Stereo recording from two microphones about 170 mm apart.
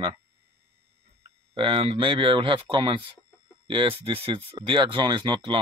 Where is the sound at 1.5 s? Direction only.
30° right (ahead or behind).